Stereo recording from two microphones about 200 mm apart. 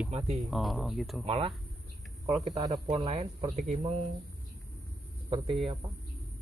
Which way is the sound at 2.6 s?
25° right (ahead or behind).